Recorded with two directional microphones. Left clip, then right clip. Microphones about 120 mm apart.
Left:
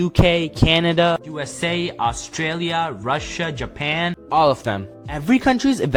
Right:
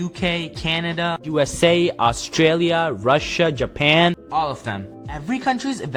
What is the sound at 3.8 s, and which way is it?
Speech, 80° right.